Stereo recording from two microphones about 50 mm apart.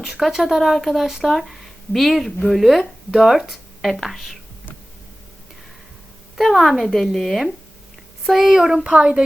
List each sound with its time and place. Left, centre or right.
0.0 s speech: centre
6.3 s speech: centre
8.8 s a woman's voice: right